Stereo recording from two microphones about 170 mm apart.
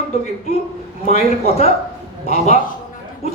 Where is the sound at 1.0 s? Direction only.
40° left (ahead or behind).